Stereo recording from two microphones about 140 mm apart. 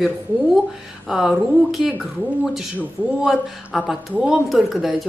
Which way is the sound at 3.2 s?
Centre (ahead or behind).